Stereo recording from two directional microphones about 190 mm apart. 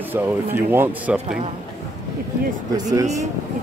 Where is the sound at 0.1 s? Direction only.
10° right (ahead or behind).